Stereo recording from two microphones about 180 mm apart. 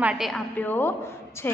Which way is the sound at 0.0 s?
5° right (ahead or behind).